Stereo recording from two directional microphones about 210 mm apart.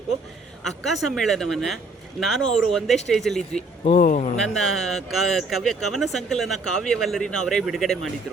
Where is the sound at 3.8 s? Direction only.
40° left (ahead or behind).